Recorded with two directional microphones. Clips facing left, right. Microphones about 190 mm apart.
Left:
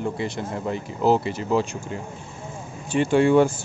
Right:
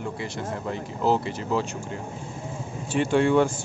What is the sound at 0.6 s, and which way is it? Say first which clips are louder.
Speech: left 4 dB; 15° left (ahead or behind).